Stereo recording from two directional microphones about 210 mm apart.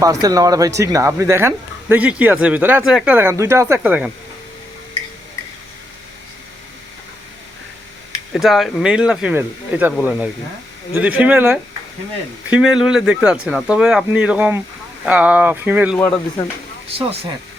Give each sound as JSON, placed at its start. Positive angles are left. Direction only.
{"t": 0.0, "sound": "speech", "side_deg": -15}
{"t": 8.3, "sound": "speech", "side_deg": 0}
{"t": 17.0, "sound": "speech", "side_deg": -25}